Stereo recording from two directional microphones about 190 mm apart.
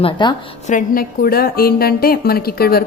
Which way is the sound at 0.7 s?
45° left (ahead or behind).